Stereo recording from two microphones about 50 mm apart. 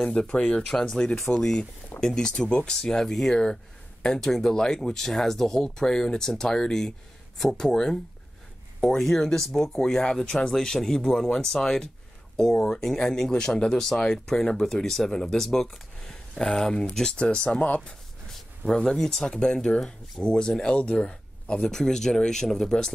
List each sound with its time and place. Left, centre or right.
0.0 s speech: centre
17.2 s speech: left
18.7 s speech: centre